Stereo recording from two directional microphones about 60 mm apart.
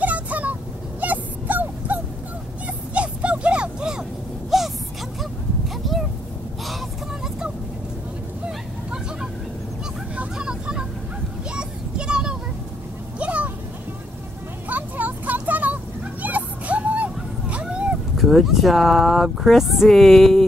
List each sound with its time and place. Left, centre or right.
0.0 s vehicle: right
1.0 s dog: right
4.5 s a sound: centre
8.5 s vehicle: centre
10.3 s vehicle: centre
13.2 s a sound: right
14.7 s vehicle: right
18.1 s speech: centre